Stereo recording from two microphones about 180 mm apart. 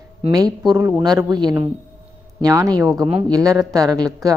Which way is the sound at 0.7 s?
15° right (ahead or behind).